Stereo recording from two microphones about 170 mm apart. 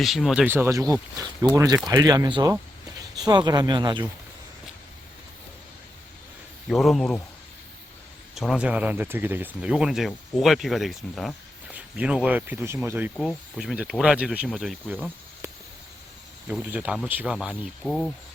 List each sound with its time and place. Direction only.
0.0 s speech: centre (ahead or behind)
0.5 s speech: 15° right (ahead or behind)
6.7 s speech: centre (ahead or behind)
8.4 s speech: 5° right (ahead or behind)
13.1 s speech: centre (ahead or behind)
16.5 s speech: 5° right (ahead or behind)